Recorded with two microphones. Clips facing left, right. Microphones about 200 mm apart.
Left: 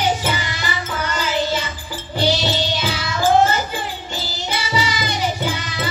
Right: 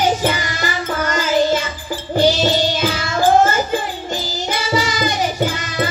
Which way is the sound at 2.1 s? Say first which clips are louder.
Right 5 dB; 45° right (ahead or behind).